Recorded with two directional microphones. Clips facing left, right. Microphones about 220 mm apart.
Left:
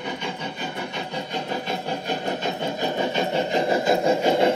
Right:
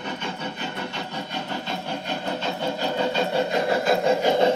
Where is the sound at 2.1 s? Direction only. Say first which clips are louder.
Left 2 dB; 15° left (ahead or behind).